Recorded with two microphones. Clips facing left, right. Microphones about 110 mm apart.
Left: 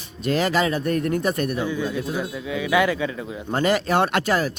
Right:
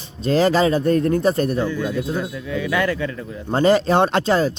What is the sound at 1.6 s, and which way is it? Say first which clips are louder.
Speech: right 3 dB; 15° left (ahead or behind).